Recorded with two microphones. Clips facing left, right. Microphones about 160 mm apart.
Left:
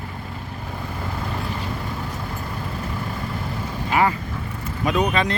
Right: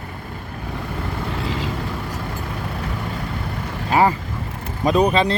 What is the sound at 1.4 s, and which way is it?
Vehicle, 90° right.